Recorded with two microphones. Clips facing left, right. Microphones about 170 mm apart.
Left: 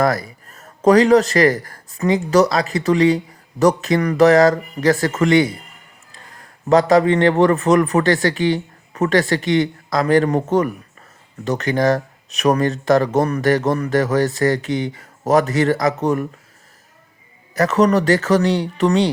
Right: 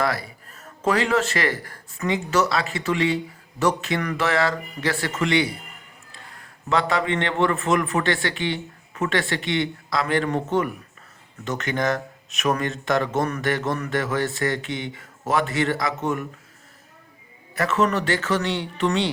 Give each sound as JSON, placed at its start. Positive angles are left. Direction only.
{"t": 0.0, "sound": "a man's voice", "side_deg": 45}
{"t": 6.7, "sound": "speech", "side_deg": 40}
{"t": 17.5, "sound": "speech", "side_deg": 40}